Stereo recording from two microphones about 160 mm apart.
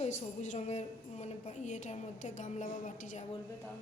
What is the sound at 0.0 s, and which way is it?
A woman's voice, 50° left (ahead or behind).